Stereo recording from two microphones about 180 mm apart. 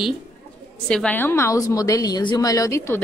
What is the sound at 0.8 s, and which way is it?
A woman's voice, 5° left (ahead or behind).